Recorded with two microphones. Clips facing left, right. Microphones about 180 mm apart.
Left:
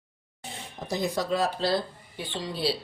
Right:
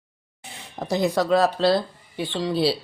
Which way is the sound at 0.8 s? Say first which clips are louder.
Right 7 dB; 75° right (ahead or behind).